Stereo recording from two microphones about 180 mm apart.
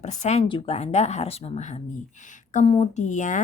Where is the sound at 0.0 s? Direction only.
40° left (ahead or behind).